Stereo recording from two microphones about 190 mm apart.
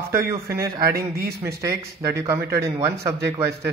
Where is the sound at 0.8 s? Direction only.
55° right (ahead or behind).